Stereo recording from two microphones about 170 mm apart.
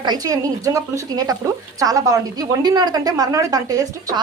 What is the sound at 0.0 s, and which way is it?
Speech, 25° right (ahead or behind).